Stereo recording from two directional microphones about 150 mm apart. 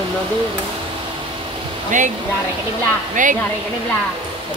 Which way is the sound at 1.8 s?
55° right (ahead or behind).